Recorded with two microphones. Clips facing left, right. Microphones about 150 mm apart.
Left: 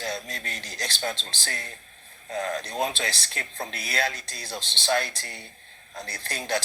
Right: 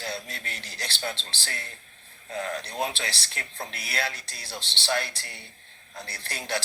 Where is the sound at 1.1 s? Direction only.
15° left (ahead or behind).